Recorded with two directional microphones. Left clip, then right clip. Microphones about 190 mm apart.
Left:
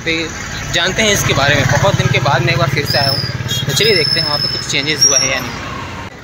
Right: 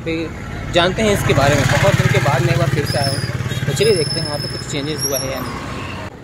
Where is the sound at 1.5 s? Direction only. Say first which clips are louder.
Left 2 dB; 15° left (ahead or behind).